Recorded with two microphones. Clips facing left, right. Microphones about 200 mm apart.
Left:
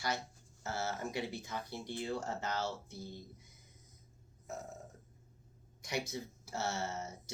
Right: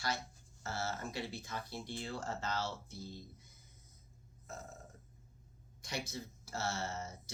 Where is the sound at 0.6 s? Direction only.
20° left (ahead or behind).